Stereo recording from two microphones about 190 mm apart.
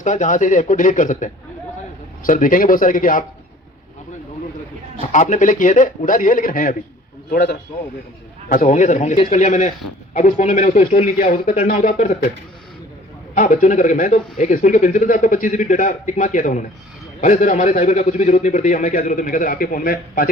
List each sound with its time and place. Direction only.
0.0 s a man's voice: 40° left (ahead or behind)
4.9 s speech: 40° left (ahead or behind)
7.3 s a man's voice: 60° left (ahead or behind)
8.4 s a man's voice: 40° left (ahead or behind)
13.3 s a man's voice: 45° left (ahead or behind)